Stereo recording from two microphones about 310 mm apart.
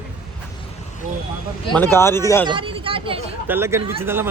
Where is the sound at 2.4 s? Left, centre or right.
Centre.